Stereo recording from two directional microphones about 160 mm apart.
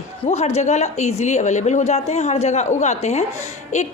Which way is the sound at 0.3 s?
40° left (ahead or behind).